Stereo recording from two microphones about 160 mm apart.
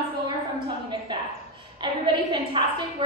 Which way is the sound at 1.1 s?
30° right (ahead or behind).